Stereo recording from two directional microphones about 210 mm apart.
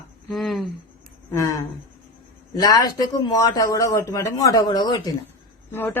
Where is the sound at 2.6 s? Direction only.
20° left (ahead or behind).